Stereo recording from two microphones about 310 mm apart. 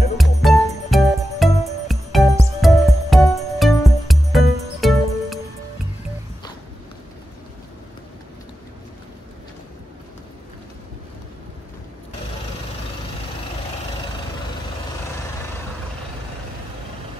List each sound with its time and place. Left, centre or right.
0.2 s music: centre